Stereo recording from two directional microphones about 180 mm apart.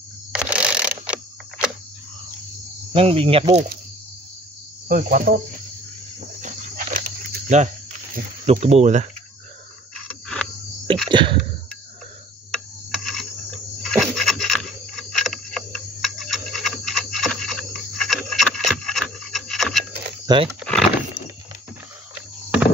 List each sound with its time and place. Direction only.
0.3 s mechanisms: 5° right (ahead or behind)
2.9 s speech: 30° right (ahead or behind)
4.8 s cricket: 50° right (ahead or behind)
6.4 s cricket: 45° right (ahead or behind)
10.2 s a sound: 5° left (ahead or behind)
11.1 s speech: 25° right (ahead or behind)
13.0 s cricket: centre (ahead or behind)
13.8 s a sound: centre (ahead or behind)
20.3 s speech: 25° right (ahead or behind)
20.6 s a sound: 5° left (ahead or behind)